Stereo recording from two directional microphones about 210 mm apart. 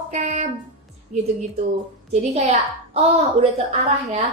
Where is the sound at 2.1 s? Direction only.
30° right (ahead or behind).